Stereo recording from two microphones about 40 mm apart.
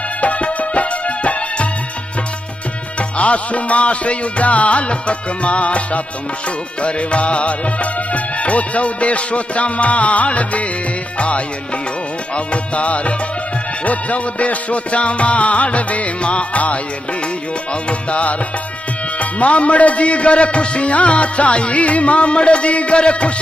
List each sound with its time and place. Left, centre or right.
0.2 s music: left
3.0 s a man's voice: left
11.1 s music: left
12.4 s a man's voice: left
17.8 s music: left
19.1 s a man's voice: left